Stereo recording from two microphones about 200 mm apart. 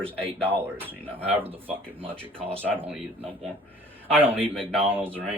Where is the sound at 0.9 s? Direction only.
10° right (ahead or behind).